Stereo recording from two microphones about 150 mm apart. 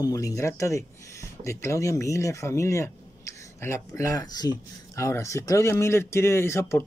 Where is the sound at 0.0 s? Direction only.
20° left (ahead or behind).